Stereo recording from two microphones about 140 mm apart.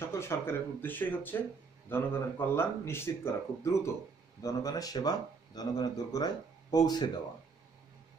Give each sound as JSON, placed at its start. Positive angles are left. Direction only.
{"t": 0.0, "sound": "speech", "side_deg": 20}